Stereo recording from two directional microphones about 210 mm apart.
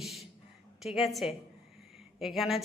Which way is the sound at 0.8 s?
Centre (ahead or behind).